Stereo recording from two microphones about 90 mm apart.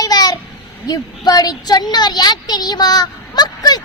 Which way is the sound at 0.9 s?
45° left (ahead or behind).